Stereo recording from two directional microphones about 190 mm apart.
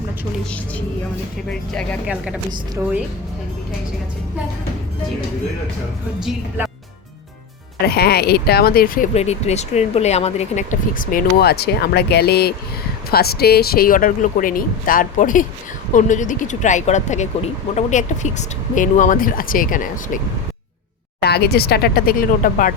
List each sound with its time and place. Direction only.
1.5 s speech: 5° left (ahead or behind)
2.0 s speech: 5° right (ahead or behind)
6.1 s speech: centre (ahead or behind)
7.9 s speech: 55° left (ahead or behind)
9.1 s speech: 35° left (ahead or behind)
21.2 s speech: 60° left (ahead or behind)